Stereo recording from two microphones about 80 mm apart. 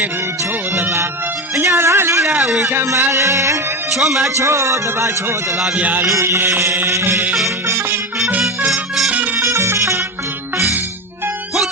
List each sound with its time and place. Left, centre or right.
0.7 s music: right
1.5 s speech: right
2.4 s a man's voice: centre
3.1 s speech: right
3.9 s a man's voice: centre
4.4 s speech: right
5.5 s a man's voice: centre
5.8 s a sound: right
6.1 s speech: right
7.7 s music: right
8.7 s music: centre
9.3 s music: right